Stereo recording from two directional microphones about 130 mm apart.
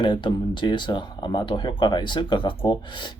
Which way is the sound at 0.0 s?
35° left (ahead or behind).